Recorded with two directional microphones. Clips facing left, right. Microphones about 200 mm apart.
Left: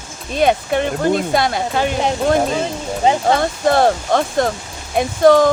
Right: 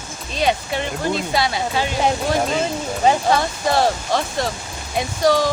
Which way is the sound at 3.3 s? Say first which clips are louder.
Left 4 dB; 55° left (ahead or behind).